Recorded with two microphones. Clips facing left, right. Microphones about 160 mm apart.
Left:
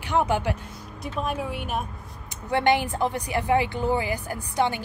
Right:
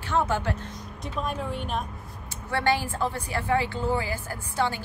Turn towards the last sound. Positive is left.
turn(degrees=20)  # may be behind; listen again after turning